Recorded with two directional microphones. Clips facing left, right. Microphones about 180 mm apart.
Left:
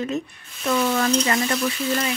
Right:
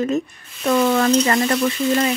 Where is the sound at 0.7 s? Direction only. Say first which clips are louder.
Right 5 dB; 60° right (ahead or behind).